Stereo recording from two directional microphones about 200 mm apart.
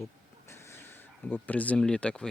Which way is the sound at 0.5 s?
10° left (ahead or behind).